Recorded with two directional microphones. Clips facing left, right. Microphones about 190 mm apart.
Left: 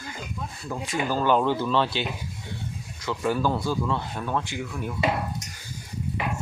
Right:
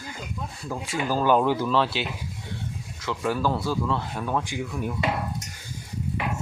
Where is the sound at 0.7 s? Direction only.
5° right (ahead or behind).